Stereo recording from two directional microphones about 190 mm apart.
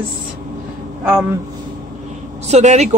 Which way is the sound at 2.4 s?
35° right (ahead or behind).